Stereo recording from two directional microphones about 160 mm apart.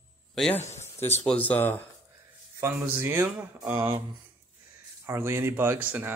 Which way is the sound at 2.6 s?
15° right (ahead or behind).